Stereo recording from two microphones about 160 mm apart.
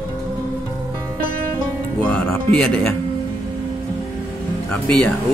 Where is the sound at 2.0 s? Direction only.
5° left (ahead or behind).